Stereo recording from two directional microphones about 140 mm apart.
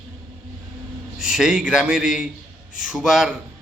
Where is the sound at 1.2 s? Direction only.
5° right (ahead or behind).